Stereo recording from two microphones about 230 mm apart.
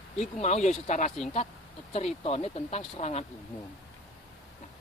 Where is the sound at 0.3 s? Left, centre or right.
Left.